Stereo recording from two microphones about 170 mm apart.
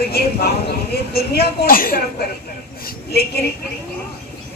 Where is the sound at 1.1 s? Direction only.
65° left (ahead or behind).